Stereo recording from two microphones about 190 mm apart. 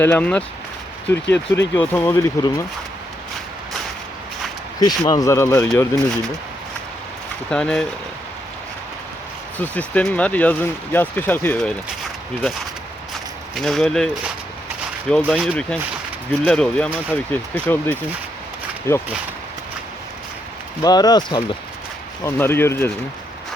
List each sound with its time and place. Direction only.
0.0 s speech: 10° left (ahead or behind)
4.8 s speech: 20° left (ahead or behind)
7.5 s speech: 5° left (ahead or behind)
9.6 s speech: 5° left (ahead or behind)
13.6 s speech: centre (ahead or behind)
15.1 s speech: 5° left (ahead or behind)
20.8 s speech: 20° left (ahead or behind)
22.2 s speech: 10° left (ahead or behind)